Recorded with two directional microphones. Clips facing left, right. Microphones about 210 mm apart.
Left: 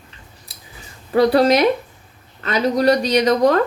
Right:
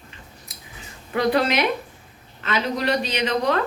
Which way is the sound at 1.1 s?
35° left (ahead or behind).